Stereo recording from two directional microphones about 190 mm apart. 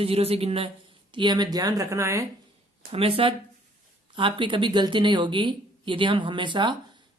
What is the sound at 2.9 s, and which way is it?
Speech, 30° right (ahead or behind).